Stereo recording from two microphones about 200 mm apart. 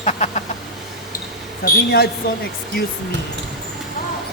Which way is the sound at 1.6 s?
55° left (ahead or behind).